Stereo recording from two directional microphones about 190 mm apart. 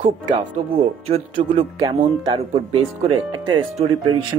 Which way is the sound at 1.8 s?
20° right (ahead or behind).